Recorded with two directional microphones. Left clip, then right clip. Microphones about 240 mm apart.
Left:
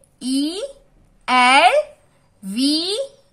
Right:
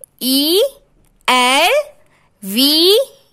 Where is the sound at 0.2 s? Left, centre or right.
Right.